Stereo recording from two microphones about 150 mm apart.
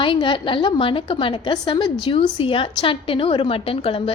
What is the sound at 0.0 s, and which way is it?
A woman's voice, 35° left (ahead or behind).